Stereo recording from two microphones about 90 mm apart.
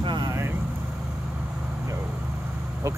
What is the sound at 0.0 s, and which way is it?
Vehicle, 60° right (ahead or behind).